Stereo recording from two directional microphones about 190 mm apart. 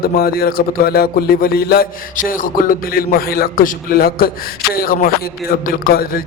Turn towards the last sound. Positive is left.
turn(degrees=50)  # may be behind; listen again after turning